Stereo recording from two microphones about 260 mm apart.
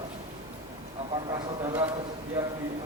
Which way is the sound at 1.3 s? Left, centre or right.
Centre.